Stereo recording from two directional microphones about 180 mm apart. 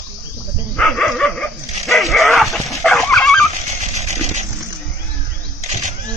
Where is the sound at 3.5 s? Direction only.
40° right (ahead or behind).